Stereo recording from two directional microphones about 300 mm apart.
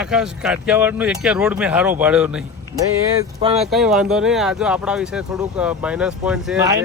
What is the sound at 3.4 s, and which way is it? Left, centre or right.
Speech, centre.